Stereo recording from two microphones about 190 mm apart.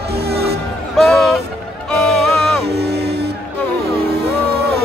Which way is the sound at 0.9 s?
Centre (ahead or behind).